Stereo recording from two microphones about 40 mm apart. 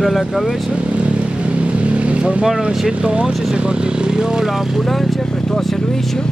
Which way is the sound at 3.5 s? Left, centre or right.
Right.